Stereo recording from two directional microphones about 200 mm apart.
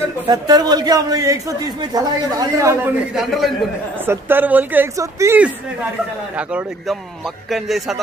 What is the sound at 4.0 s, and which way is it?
A man's voice, 10° right (ahead or behind).